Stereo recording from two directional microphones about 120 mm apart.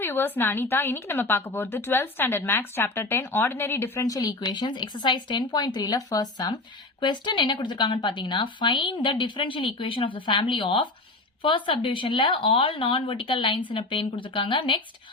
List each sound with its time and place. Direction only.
0.0 s a woman's voice: 20° left (ahead or behind); by 14.8 s 45° left (ahead or behind)